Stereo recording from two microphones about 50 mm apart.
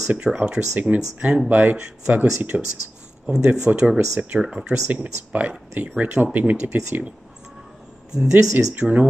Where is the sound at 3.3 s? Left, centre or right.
Centre; by 7.1 s right.